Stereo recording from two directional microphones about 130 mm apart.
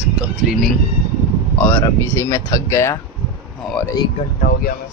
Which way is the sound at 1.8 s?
25° left (ahead or behind).